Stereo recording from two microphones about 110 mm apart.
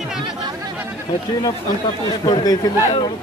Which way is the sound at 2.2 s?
35° left (ahead or behind).